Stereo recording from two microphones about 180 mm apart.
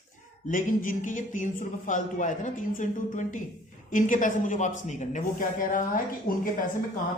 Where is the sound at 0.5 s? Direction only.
45° left (ahead or behind).